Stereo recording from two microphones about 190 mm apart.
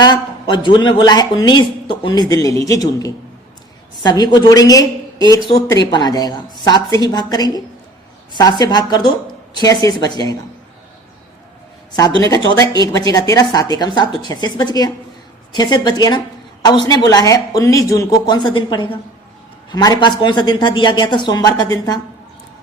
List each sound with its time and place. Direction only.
0.0 s speech: 25° left (ahead or behind)
12.7 s speech: 20° left (ahead or behind)